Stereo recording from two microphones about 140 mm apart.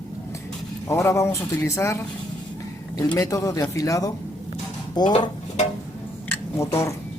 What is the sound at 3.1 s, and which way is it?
Speech, 20° left (ahead or behind).